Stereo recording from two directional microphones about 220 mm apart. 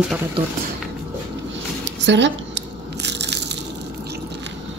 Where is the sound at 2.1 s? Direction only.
55° right (ahead or behind).